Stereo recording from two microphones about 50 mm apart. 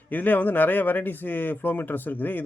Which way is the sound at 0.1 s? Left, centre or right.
Left.